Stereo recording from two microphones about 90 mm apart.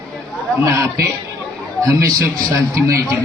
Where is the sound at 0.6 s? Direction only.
35° right (ahead or behind).